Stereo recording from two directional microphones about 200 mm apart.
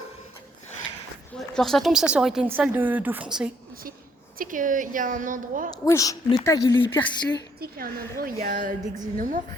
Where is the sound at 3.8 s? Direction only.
45° right (ahead or behind).